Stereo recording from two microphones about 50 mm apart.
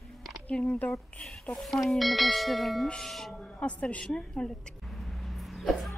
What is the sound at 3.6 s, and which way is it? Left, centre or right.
Speech, left.